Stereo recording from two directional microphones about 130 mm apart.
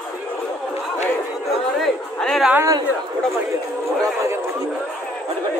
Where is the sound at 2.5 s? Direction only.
20° right (ahead or behind).